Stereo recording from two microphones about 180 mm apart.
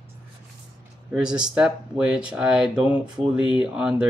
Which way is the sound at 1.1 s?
5° right (ahead or behind).